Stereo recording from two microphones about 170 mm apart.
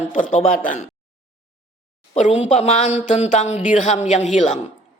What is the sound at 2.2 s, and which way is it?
A woman's voice, 40° left (ahead or behind).